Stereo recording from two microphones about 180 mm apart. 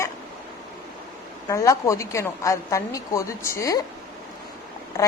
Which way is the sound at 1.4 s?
20° left (ahead or behind).